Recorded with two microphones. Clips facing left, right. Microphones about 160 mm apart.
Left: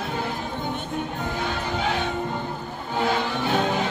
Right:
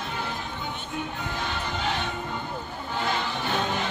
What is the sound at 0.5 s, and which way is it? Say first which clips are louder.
Music: left 5 dB; 40° left (ahead or behind).